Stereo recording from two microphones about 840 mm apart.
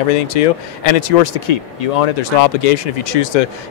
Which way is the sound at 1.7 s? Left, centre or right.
Left.